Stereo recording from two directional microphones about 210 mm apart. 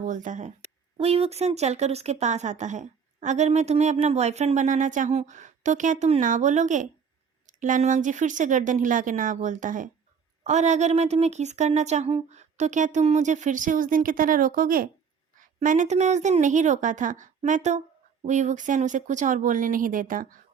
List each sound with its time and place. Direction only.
0.0 s speech: 35° right (ahead or behind)